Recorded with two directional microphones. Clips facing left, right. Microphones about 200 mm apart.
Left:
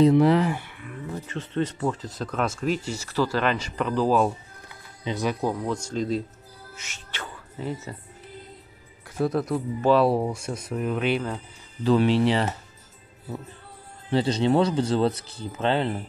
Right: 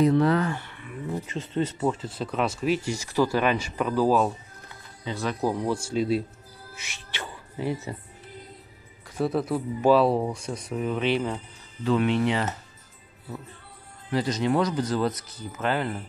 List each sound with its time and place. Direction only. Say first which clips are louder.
0.1 s speech: left 3 dB; 25° left (ahead or behind)
0.5 s a sound: left 3 dB; 10° left (ahead or behind)
0.8 s speech: right 3 dB; 10° right (ahead or behind)
5.0 s speech: left 3 dB; 20° left (ahead or behind)
5.7 s speech: right 2 dB; 10° right (ahead or behind)
6.7 s music: right 1 dB; 10° right (ahead or behind)
9.2 s speech: left 1 dB; centre (ahead or behind)
10.0 s speech: left 1 dB; 5° left (ahead or behind)
11.8 s speech: left 3 dB; 35° left (ahead or behind)
14.1 s speech: left 3 dB; 30° left (ahead or behind)